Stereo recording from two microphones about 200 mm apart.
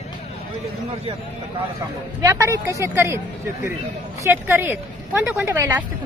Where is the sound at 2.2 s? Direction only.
15° right (ahead or behind).